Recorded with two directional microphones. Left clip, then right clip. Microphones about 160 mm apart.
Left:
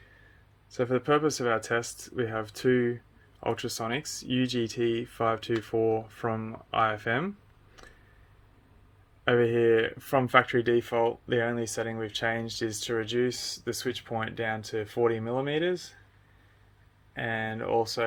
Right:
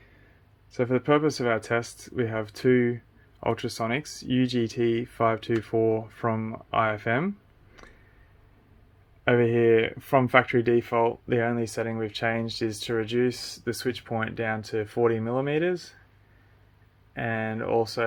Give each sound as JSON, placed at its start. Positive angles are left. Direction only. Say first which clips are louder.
{"t": 0.7, "sound": "speech", "louder": "right 2 dB", "side_deg": -40}
{"t": 9.2, "sound": "speech", "louder": "right 2 dB", "side_deg": -40}
{"t": 17.2, "sound": "speech", "louder": "right 2 dB", "side_deg": -35}